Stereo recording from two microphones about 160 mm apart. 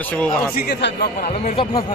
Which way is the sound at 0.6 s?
85° left.